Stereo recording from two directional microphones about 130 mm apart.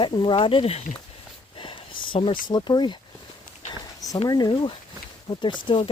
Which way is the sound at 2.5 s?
35° left (ahead or behind).